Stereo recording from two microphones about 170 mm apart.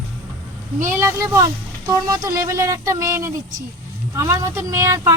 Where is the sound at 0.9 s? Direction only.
15° right (ahead or behind).